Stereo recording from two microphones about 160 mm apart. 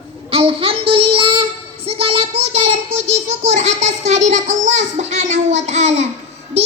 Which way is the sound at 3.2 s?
45° right (ahead or behind).